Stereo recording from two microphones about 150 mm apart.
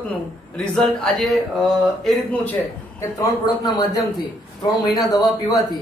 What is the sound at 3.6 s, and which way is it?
Speech, 25° left (ahead or behind).